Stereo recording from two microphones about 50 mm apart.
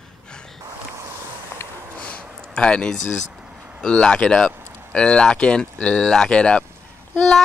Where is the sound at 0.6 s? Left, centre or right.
Right.